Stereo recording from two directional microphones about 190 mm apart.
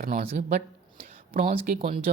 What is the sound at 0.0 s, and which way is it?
Speech, 45° right (ahead or behind).